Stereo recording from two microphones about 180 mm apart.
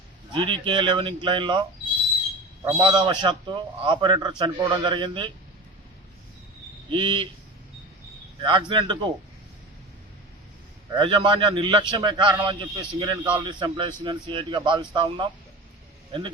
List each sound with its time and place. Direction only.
0.3 s a man's voice: 25° right (ahead or behind)
2.6 s a man's voice: 20° right (ahead or behind)
6.9 s a man's voice: 25° right (ahead or behind)
8.4 s a man's voice: 25° right (ahead or behind)
10.9 s a man's voice: 25° right (ahead or behind)